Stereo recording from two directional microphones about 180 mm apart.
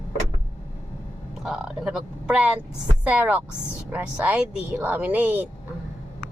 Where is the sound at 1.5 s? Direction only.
Centre (ahead or behind).